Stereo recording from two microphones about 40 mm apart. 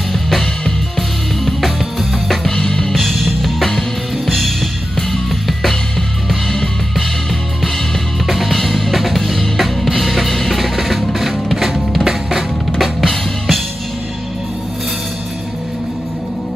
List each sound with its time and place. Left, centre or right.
0.1 s music: centre
2.9 s music: centre
8.3 s drum kit: centre
11.1 s drum: centre
13.0 s music: centre